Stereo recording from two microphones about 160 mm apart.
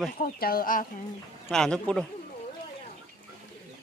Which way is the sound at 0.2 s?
65° left (ahead or behind).